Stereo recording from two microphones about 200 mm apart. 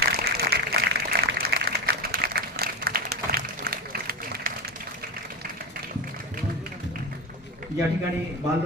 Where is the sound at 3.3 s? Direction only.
50° right (ahead or behind).